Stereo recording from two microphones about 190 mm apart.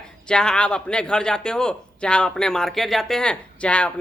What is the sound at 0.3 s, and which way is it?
Speech, 5° left (ahead or behind).